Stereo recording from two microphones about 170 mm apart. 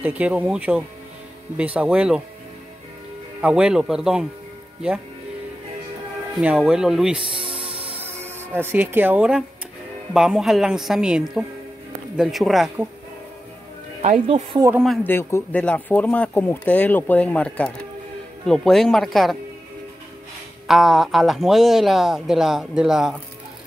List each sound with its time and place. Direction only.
0.0 s speech: 10° right (ahead or behind)
3.3 s speech: 5° right (ahead or behind)
6.3 s speech: 5° right (ahead or behind)
7.4 s music: 35° right (ahead or behind)
8.0 s speech: 15° right (ahead or behind)
14.2 s speech: 35° right (ahead or behind)
15.0 s speech: 15° left (ahead or behind)
20.6 s speech: centre (ahead or behind)